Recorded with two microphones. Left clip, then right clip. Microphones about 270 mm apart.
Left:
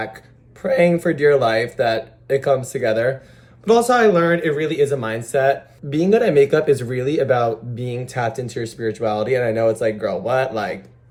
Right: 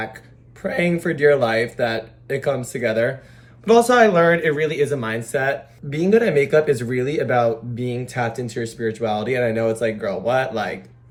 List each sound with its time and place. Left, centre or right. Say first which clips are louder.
0.6 s speech: left 6 dB; centre